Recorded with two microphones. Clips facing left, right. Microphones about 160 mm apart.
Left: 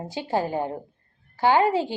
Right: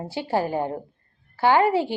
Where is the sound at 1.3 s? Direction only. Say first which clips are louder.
Right 1 dB; 15° left (ahead or behind).